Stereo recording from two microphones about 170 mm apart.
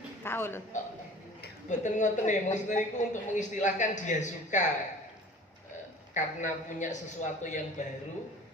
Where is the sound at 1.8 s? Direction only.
45° left (ahead or behind).